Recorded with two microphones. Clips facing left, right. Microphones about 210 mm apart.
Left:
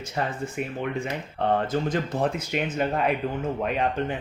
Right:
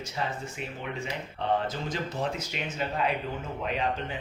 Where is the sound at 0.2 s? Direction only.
55° left (ahead or behind).